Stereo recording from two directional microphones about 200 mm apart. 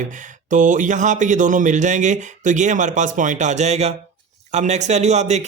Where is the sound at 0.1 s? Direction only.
40° right (ahead or behind).